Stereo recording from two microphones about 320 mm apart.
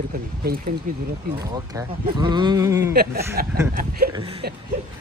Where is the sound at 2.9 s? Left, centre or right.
Right.